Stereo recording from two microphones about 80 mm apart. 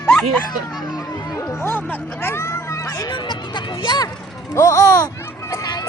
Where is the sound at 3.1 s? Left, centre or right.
Left.